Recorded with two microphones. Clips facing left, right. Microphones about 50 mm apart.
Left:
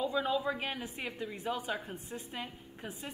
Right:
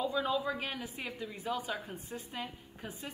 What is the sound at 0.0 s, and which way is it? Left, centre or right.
A woman's voice, centre.